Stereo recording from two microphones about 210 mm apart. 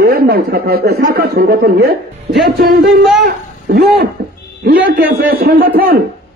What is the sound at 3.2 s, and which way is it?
A child's voice, 45° right (ahead or behind).